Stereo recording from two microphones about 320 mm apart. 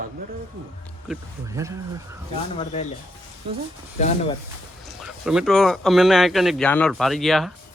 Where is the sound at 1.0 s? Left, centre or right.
Centre.